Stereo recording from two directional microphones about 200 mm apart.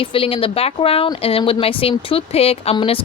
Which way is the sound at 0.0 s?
25° left (ahead or behind).